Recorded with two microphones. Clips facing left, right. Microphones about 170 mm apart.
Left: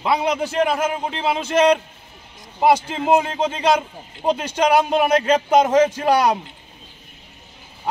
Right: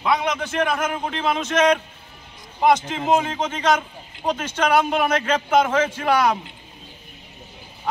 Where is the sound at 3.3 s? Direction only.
30° left (ahead or behind).